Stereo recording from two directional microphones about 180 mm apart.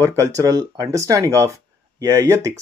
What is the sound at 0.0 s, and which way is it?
A man's voice, 20° right (ahead or behind).